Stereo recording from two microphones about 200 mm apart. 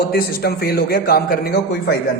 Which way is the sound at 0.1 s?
50° left (ahead or behind).